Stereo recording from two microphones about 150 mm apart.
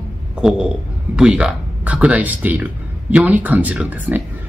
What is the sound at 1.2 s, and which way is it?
Speech, 5° right (ahead or behind).